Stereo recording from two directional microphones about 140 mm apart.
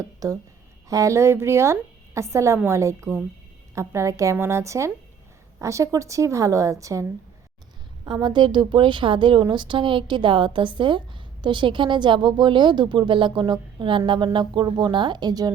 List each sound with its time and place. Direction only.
0.0 s a woman's voice: 25° right (ahead or behind)